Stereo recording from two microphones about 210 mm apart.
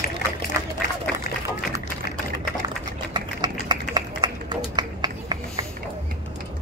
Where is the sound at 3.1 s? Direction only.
20° right (ahead or behind).